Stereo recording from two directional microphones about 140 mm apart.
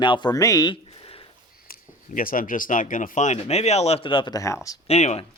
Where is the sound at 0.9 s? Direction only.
40° left (ahead or behind).